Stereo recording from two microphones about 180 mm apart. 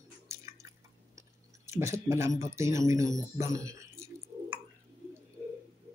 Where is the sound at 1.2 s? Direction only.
15° right (ahead or behind).